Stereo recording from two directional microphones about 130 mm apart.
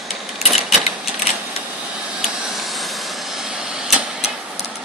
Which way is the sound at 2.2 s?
Centre (ahead or behind).